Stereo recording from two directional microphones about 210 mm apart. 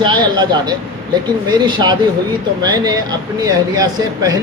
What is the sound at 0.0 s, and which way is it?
A man's voice, 20° right (ahead or behind).